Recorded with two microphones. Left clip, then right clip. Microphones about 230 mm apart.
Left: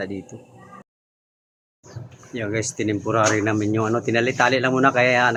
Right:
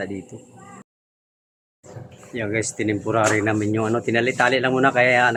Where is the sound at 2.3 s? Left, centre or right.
Centre.